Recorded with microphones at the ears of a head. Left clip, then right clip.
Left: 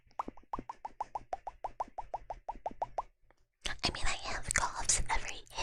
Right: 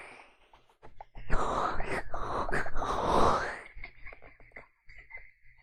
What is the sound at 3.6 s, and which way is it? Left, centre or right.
Whispering, left.